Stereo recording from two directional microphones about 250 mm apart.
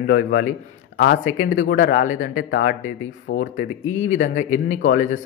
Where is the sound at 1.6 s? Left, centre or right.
Left.